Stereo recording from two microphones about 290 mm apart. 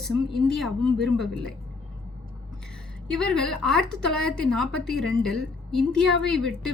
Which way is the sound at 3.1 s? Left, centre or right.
Centre.